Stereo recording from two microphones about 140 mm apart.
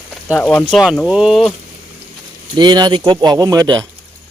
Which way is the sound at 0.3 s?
10° left (ahead or behind).